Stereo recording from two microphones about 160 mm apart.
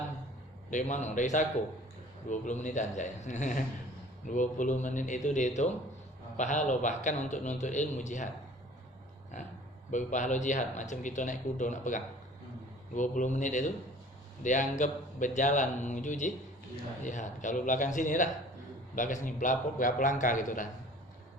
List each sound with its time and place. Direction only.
0.7 s speech: 50° left (ahead or behind)
9.9 s speech: 50° left (ahead or behind)